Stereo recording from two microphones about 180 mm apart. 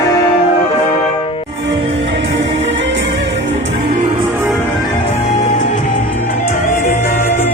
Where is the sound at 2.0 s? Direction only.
90° right.